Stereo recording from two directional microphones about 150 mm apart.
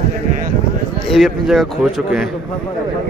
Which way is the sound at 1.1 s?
Centre (ahead or behind).